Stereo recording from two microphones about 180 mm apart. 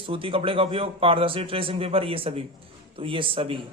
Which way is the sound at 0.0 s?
30° right (ahead or behind).